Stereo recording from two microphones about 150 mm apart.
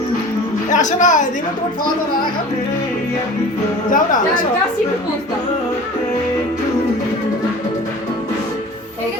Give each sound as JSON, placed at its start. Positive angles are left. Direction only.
{"t": 0.7, "sound": "speech", "side_deg": 55}
{"t": 3.8, "sound": "speech", "side_deg": 60}